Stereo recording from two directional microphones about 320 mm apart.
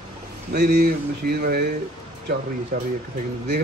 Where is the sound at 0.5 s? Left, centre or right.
Right.